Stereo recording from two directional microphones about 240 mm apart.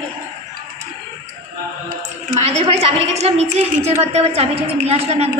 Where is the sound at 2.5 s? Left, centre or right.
Right.